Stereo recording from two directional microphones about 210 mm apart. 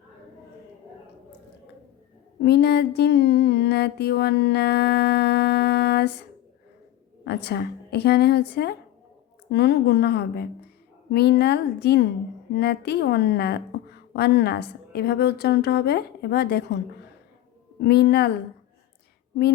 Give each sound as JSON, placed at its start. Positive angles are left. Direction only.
{"t": 2.4, "sound": "mantra", "side_deg": 50}
{"t": 7.3, "sound": "mantra", "side_deg": 50}